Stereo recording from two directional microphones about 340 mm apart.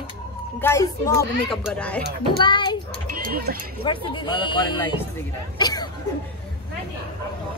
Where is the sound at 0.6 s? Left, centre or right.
Centre.